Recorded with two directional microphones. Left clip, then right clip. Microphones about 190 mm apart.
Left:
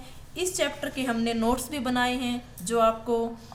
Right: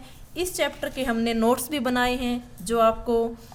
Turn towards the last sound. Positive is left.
turn(degrees=-45)  # may be behind; listen again after turning